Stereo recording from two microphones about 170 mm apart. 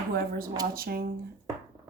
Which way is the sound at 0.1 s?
60° right (ahead or behind).